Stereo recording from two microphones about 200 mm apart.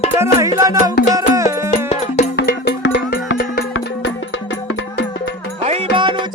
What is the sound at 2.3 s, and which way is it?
Music, 50° left (ahead or behind).